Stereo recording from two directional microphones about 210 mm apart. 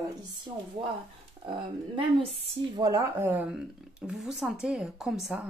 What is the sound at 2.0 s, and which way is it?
A woman's voice, 25° right (ahead or behind).